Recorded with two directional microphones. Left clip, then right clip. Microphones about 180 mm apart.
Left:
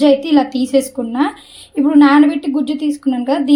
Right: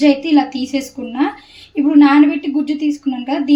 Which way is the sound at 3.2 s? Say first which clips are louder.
Left 4 dB; 35° left (ahead or behind).